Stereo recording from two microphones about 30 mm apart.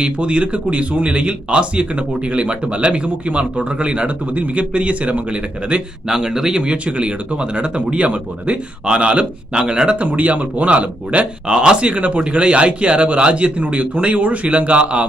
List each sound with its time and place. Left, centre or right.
0.0 s speech: right
6.0 s speech: centre
6.6 s speech: right
9.9 s speech: right
11.4 s speech: right
11.9 s speech: right